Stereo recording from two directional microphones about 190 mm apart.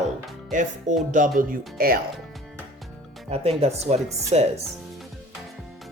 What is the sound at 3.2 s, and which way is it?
Speech, 30° right (ahead or behind).